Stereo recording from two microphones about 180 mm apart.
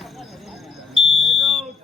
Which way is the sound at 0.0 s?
Centre (ahead or behind).